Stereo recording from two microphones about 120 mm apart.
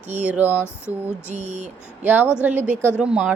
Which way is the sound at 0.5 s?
20° left (ahead or behind).